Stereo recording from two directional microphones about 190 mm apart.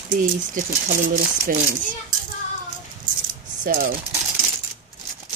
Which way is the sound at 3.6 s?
45° right (ahead or behind).